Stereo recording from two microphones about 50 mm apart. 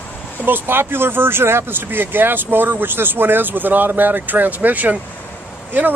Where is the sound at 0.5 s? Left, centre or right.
Right.